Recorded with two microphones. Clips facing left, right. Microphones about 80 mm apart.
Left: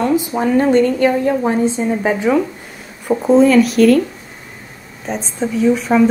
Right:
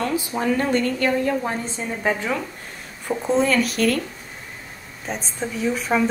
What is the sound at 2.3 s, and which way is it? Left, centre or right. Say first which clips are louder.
Speech: left 11 dB; left.